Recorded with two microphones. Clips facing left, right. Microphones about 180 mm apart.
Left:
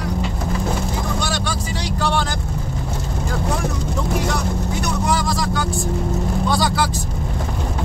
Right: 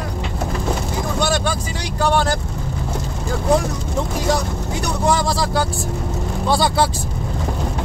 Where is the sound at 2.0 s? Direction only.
40° right (ahead or behind).